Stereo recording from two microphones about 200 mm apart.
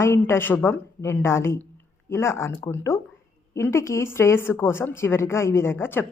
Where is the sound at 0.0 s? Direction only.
10° left (ahead or behind).